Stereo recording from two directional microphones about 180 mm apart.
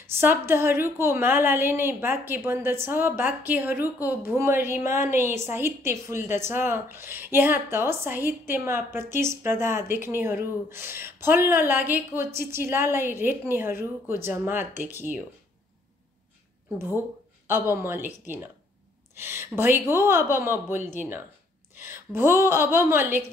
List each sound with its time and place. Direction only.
0.0 s a woman's voice: 10° right (ahead or behind)
17.5 s a woman's voice: 15° right (ahead or behind)